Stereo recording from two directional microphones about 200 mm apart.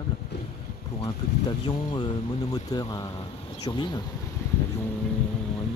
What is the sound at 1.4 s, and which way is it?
Speech, 25° left (ahead or behind).